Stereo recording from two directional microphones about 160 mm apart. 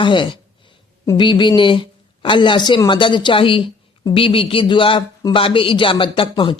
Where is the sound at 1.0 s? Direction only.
30° left (ahead or behind).